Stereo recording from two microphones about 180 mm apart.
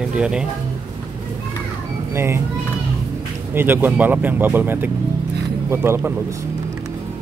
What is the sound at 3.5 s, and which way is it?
Speech, 10° right (ahead or behind).